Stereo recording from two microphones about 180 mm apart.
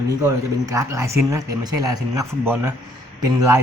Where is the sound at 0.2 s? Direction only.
20° right (ahead or behind).